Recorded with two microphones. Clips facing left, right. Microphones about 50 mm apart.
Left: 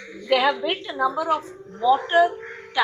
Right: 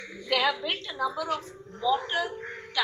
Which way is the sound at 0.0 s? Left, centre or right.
Centre.